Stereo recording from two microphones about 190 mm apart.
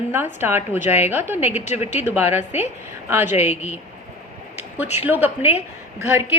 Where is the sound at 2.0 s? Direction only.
10° right (ahead or behind).